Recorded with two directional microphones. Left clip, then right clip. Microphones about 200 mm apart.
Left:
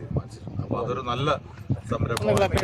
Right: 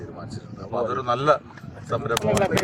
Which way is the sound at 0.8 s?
Centre (ahead or behind).